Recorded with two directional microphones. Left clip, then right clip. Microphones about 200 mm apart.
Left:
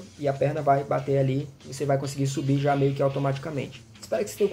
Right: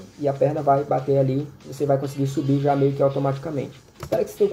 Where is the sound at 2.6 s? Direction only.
15° left (ahead or behind).